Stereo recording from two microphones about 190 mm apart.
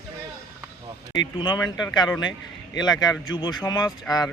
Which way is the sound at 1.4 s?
25° left (ahead or behind).